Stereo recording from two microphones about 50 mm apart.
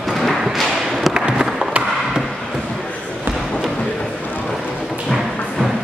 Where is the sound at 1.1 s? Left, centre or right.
Centre.